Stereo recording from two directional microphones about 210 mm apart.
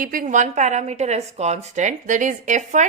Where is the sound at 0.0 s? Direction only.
40° right (ahead or behind).